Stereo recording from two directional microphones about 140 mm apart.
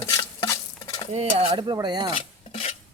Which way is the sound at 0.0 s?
30° left (ahead or behind).